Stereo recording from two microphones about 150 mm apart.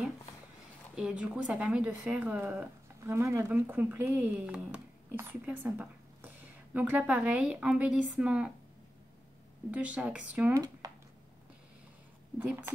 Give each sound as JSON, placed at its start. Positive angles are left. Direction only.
{"t": 0.9, "sound": "speech", "side_deg": -5}
{"t": 9.7, "sound": "speech", "side_deg": -10}
{"t": 10.8, "sound": "a sound", "side_deg": -25}
{"t": 12.4, "sound": "speech", "side_deg": -10}